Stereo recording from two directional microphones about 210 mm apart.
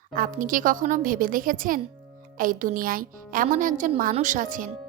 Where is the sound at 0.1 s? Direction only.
40° right (ahead or behind).